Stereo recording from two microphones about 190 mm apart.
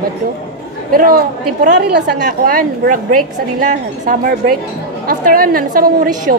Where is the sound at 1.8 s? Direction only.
60° right (ahead or behind).